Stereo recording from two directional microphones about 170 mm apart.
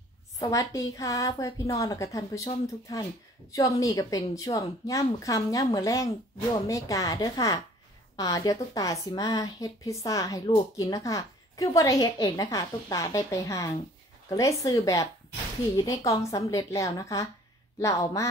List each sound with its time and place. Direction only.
0.4 s speech: 20° left (ahead or behind)